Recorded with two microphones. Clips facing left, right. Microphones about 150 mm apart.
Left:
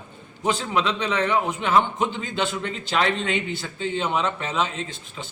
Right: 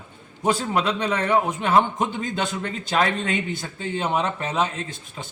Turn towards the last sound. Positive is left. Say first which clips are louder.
# even
turn(degrees=-45)  # may be behind; listen again after turning